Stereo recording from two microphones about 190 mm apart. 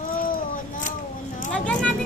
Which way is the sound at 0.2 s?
45° left (ahead or behind).